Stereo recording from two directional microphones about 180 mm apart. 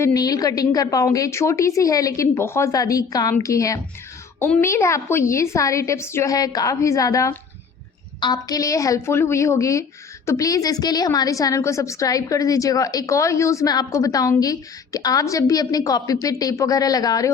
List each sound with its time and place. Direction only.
0.0 s a woman's voice: 20° left (ahead or behind)